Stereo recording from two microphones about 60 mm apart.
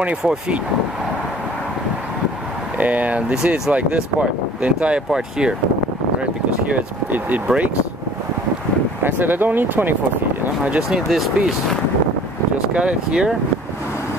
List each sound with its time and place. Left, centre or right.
2.8 s speech: right
6.7 s speech: right
9.0 s speech: right
10.4 s speech: right
10.8 s speech: centre
12.7 s speech: centre